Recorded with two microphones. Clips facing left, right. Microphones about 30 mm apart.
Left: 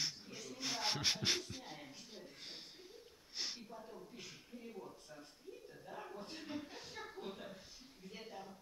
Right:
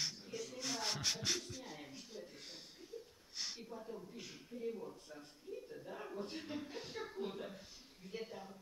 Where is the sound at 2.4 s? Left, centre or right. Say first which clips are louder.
Left 1 dB; left.